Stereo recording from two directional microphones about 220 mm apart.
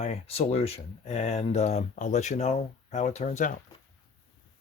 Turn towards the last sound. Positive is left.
turn(degrees=35)  # may be behind; listen again after turning